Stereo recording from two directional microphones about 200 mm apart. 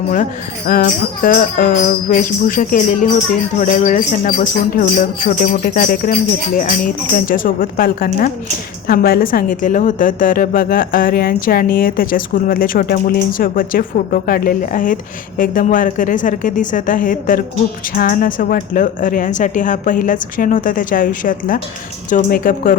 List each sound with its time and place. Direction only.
0.7 s a woman's voice: 45° left (ahead or behind)